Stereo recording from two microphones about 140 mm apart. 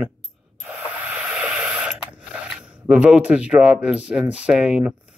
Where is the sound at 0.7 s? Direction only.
10° right (ahead or behind).